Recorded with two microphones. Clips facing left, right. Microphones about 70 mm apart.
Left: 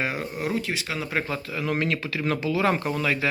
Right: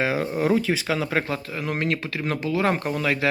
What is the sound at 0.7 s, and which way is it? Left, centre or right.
Speech, right.